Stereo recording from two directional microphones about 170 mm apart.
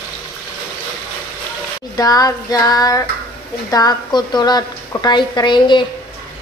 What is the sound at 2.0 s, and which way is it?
A woman's voice, 20° left (ahead or behind).